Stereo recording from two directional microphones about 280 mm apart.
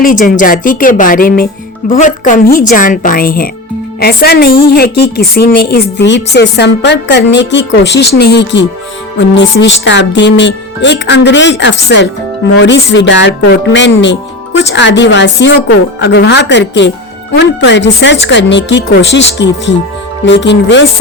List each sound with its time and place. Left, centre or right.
0.0 s a woman's voice: left